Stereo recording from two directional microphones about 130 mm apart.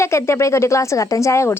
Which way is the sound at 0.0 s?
20° left (ahead or behind).